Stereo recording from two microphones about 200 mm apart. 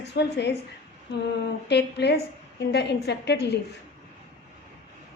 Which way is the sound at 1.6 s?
55° left (ahead or behind).